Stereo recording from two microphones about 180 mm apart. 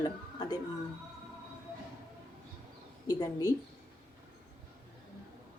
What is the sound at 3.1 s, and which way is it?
Speech, 20° left (ahead or behind).